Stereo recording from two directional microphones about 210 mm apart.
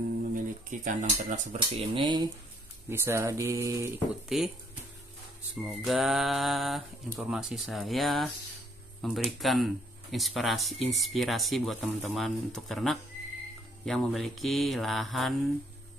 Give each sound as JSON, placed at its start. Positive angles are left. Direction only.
{"t": 0.3, "sound": "speech", "side_deg": -40}
{"t": 4.3, "sound": "speech", "side_deg": 0}
{"t": 5.6, "sound": "speech", "side_deg": 0}